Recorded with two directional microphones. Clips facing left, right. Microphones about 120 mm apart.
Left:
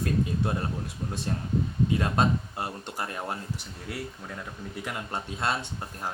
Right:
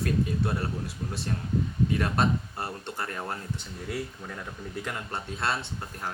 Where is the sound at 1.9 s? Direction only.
20° left (ahead or behind).